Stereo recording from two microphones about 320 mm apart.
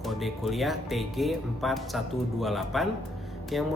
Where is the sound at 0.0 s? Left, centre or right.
Centre.